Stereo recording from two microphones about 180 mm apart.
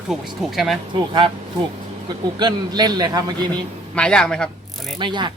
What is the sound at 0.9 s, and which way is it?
Speech, 25° right (ahead or behind).